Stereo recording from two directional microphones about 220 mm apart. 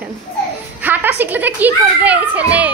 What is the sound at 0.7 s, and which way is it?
A woman's voice, 10° right (ahead or behind).